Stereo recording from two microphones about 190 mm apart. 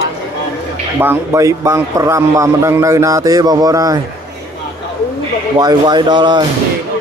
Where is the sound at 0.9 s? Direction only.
10° right (ahead or behind).